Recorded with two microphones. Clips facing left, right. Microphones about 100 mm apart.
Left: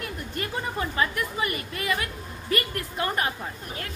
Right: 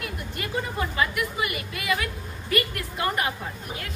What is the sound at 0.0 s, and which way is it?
A woman's voice, 35° left (ahead or behind).